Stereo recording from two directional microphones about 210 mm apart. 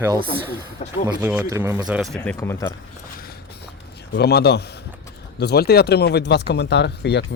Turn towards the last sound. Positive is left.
turn(degrees=55)  # may be behind; listen again after turning